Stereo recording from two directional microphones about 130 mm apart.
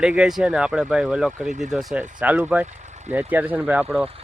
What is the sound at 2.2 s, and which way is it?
Speech, 10° right (ahead or behind).